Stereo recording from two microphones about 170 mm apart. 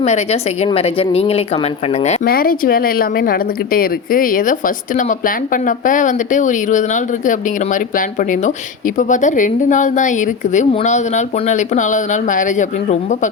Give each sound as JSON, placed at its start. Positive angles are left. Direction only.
{"t": 0.0, "sound": "speech", "side_deg": 40}
{"t": 2.2, "sound": "speech", "side_deg": 60}